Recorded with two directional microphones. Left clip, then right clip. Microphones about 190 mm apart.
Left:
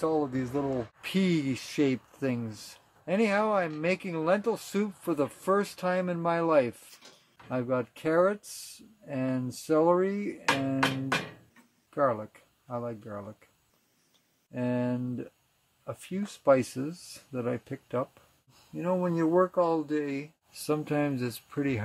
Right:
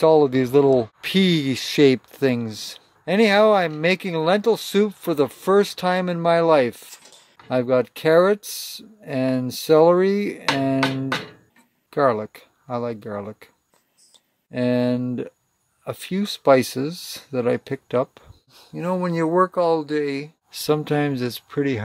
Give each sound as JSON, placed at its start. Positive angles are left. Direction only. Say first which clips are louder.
{"t": 0.0, "sound": "speech", "louder": "right 14 dB", "side_deg": -40}
{"t": 11.9, "sound": "speech", "louder": "right 8 dB", "side_deg": -45}
{"t": 14.5, "sound": "speech", "louder": "right 10 dB", "side_deg": -45}